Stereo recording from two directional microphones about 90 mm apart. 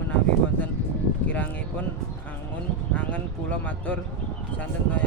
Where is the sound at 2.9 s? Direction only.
15° left (ahead or behind).